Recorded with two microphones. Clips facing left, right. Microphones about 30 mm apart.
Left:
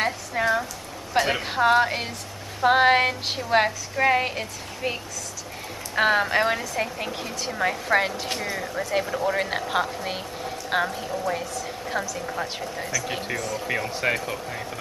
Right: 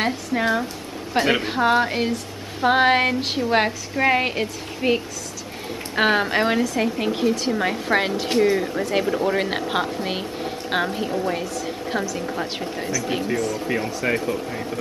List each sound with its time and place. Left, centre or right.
0.0 s a woman's voice: centre
1.4 s a woman's voice: centre
10.9 s a woman's voice: right
11.6 s a sound: centre
12.1 s a woman's voice: centre
12.5 s a woman's voice: right
12.9 s a woman's voice: centre